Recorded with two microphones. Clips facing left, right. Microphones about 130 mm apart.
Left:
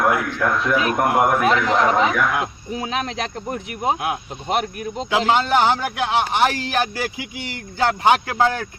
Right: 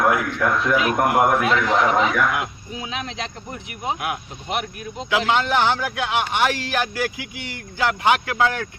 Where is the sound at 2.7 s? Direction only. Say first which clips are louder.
Left 5 dB; 45° left (ahead or behind).